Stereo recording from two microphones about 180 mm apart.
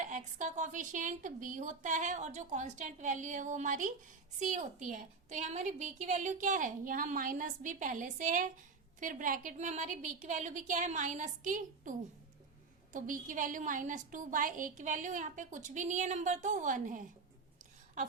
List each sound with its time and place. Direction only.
0.0 s a woman's voice: 45° right (ahead or behind)